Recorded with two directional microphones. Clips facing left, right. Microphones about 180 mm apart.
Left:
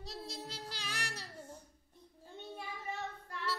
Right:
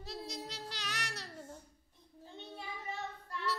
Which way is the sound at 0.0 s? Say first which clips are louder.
Right 2 dB; centre (ahead or behind).